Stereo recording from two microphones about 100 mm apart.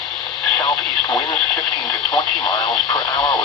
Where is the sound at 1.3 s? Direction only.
5° left (ahead or behind).